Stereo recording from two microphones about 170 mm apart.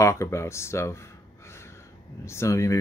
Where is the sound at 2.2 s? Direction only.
15° left (ahead or behind).